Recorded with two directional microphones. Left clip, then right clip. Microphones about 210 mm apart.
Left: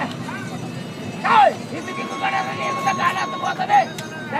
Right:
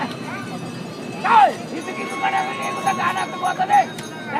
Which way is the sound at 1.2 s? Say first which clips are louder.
Right 1 dB; 30° left (ahead or behind).